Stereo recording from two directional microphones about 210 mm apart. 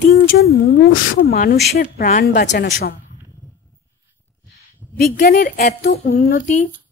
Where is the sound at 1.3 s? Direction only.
45° left (ahead or behind).